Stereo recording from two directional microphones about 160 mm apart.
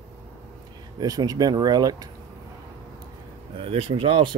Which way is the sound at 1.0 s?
25° right (ahead or behind).